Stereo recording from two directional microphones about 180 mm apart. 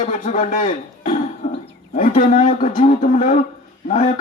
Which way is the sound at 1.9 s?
50° left (ahead or behind).